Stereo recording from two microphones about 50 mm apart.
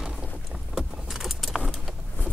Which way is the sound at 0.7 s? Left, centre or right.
Centre.